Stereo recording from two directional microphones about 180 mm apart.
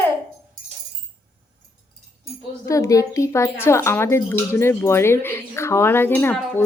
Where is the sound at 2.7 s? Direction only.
15° left (ahead or behind).